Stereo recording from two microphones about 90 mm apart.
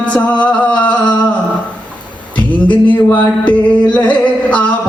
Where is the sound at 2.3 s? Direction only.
15° left (ahead or behind).